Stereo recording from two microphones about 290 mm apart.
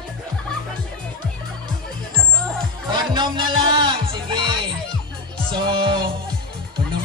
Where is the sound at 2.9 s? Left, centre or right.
Centre.